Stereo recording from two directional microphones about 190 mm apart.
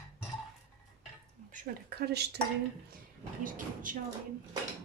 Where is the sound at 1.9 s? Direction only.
60° right (ahead or behind).